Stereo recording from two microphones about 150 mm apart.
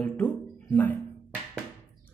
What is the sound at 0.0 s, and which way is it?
Music, 10° left (ahead or behind).